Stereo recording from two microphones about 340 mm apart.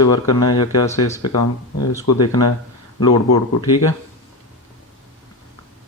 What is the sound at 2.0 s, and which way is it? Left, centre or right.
Speech, left.